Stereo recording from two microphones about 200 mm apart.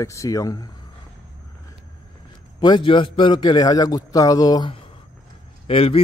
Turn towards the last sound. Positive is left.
turn(degrees=30)  # may be behind; listen again after turning